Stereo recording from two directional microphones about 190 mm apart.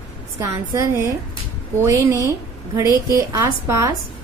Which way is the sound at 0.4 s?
15° right (ahead or behind).